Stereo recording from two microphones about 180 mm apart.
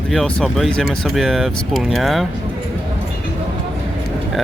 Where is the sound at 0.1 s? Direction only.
Centre (ahead or behind).